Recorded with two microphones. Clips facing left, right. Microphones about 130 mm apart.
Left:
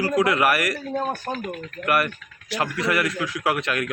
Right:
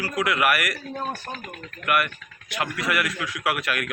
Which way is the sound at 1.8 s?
35° left (ahead or behind).